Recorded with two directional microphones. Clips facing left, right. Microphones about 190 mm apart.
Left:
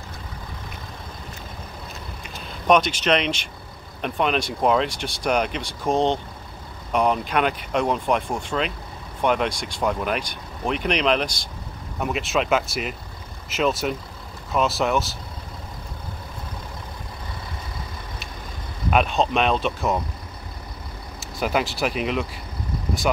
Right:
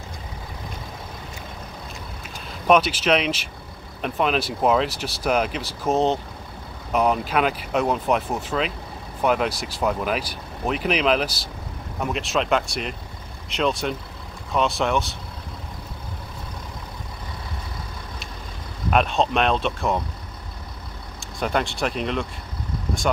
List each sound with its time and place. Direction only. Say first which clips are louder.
2.2 s speech: even; 5° right (ahead or behind)
18.9 s speech: even; centre (ahead or behind)
21.2 s speech: left 1 dB; 5° left (ahead or behind)